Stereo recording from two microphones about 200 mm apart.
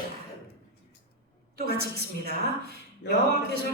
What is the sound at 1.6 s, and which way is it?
A man's voice, 50° right (ahead or behind).